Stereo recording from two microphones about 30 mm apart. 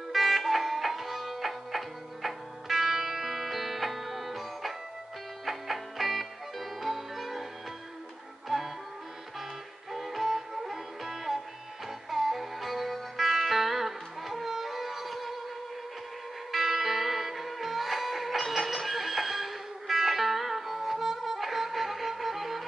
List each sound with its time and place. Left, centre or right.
0.1 s music: centre
8.5 s music: centre
9.9 s music: centre
16.5 s music: centre